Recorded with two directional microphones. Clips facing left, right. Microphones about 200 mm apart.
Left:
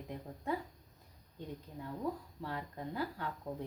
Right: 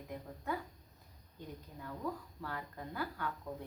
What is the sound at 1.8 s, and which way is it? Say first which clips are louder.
Speech: left 2 dB; 25° left (ahead or behind).